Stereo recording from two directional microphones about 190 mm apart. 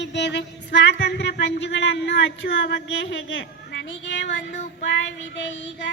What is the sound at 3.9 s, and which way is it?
Music, 70° left (ahead or behind).